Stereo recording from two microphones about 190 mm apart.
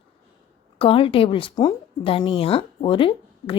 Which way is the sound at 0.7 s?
30° left (ahead or behind).